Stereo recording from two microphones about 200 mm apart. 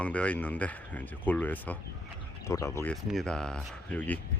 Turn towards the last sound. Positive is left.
turn(degrees=5)  # may be behind; listen again after turning